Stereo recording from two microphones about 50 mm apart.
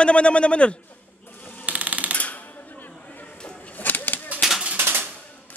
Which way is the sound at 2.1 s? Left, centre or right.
Left.